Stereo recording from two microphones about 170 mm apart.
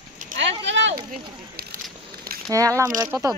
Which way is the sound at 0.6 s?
90° right.